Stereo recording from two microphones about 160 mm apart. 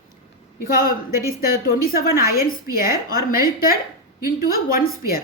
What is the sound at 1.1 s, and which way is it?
Speech, 20° right (ahead or behind).